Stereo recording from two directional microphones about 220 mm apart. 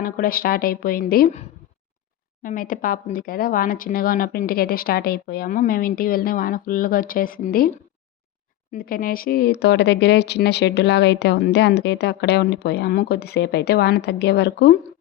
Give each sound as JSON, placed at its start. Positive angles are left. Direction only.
{"t": 0.0, "sound": "speech", "side_deg": 40}
{"t": 8.7, "sound": "speech", "side_deg": 40}